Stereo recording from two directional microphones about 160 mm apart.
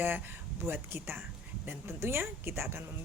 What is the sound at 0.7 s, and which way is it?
Speech, 15° right (ahead or behind).